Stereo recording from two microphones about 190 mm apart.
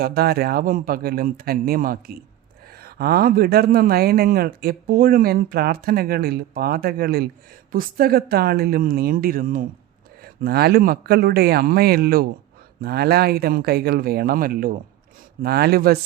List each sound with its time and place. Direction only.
0.0 s speech: 55° right (ahead or behind)